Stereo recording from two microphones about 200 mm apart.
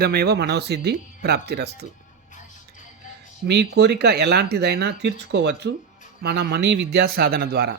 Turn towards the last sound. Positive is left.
turn(degrees=-50)  # may be behind; listen again after turning